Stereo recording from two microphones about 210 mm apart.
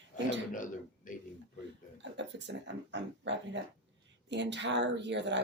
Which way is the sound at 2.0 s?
60° right (ahead or behind).